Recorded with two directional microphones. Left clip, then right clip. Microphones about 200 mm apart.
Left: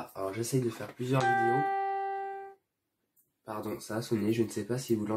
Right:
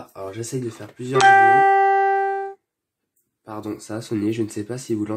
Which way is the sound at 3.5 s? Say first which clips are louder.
Right 6 dB; 45° right (ahead or behind).